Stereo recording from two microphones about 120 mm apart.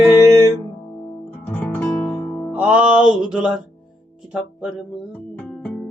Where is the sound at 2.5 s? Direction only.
10° right (ahead or behind).